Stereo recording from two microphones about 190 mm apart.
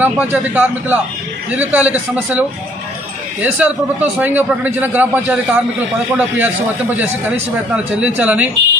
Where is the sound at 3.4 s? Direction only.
10° right (ahead or behind).